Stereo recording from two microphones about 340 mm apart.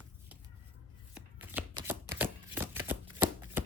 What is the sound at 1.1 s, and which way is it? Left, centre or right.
Shuffling cards, centre.